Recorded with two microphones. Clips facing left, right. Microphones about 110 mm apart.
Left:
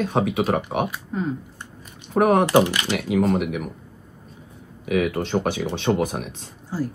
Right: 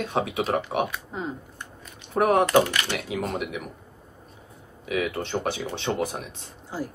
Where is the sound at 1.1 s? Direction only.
20° right (ahead or behind).